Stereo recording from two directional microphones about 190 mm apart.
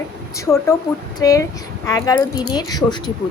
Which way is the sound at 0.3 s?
15° left (ahead or behind).